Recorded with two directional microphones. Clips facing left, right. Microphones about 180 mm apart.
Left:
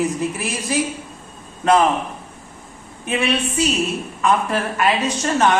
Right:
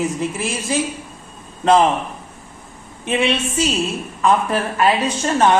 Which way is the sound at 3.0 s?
25° right (ahead or behind).